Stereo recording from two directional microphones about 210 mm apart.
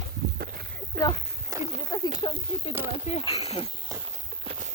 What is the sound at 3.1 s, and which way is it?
Speech, 25° left (ahead or behind).